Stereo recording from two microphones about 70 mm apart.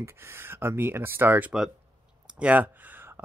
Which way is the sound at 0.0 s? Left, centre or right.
Right.